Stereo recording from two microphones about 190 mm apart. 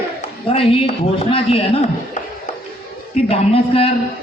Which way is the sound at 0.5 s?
30° left (ahead or behind).